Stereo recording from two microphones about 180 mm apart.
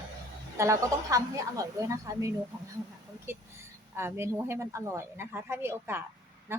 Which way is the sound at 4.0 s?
15° right (ahead or behind).